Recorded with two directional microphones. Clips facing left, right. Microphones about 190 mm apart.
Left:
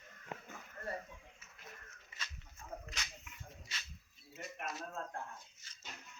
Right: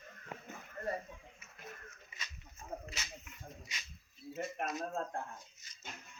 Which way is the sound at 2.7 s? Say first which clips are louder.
Right 4 dB; 30° right (ahead or behind).